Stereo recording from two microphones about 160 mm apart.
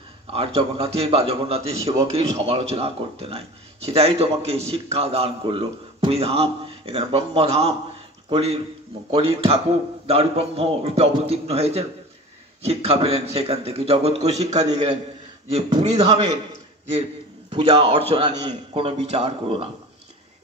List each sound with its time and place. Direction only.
0.3 s a man's voice: 40° right (ahead or behind)
17.5 s a man's voice: 30° right (ahead or behind)